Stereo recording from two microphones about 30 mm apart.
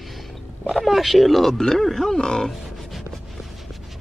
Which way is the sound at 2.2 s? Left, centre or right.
Left.